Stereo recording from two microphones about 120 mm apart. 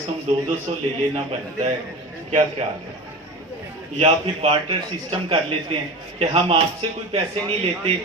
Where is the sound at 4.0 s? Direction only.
55° right (ahead or behind).